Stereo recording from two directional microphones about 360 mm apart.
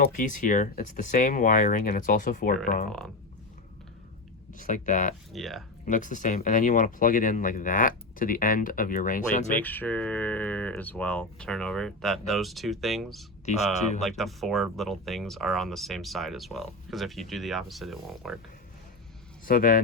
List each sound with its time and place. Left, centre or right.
0.0 s speech: left
4.5 s speech: left
5.3 s speech: centre
5.8 s speech: left
9.5 s speech: centre
13.5 s speech: centre
14.0 s speech: centre
19.5 s speech: left